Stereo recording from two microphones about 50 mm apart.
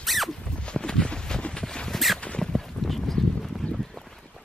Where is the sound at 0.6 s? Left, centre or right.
Centre.